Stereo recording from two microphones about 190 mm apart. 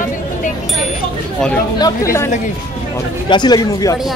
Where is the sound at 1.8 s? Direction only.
15° left (ahead or behind).